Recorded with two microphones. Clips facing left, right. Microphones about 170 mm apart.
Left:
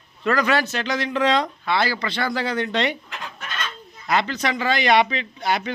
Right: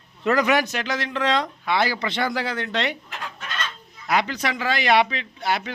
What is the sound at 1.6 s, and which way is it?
Speech, 15° right (ahead or behind).